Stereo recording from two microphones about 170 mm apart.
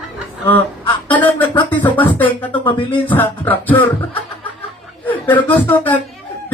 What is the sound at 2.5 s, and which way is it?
Music, 30° left (ahead or behind).